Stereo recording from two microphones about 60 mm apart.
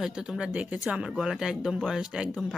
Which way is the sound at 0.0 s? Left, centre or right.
Centre.